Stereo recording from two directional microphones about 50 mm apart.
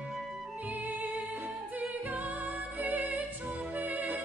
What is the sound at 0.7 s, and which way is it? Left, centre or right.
Music, right.